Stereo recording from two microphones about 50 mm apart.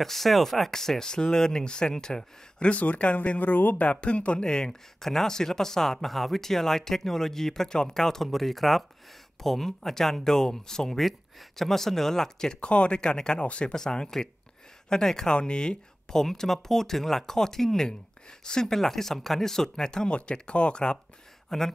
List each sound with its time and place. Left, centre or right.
0.0 s speech: centre
2.7 s speech: left; by 21.7 s centre